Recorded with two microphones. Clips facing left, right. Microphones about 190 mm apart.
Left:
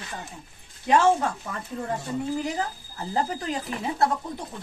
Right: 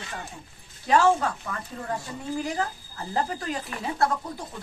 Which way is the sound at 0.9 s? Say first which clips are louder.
Left 1 dB; 20° left (ahead or behind).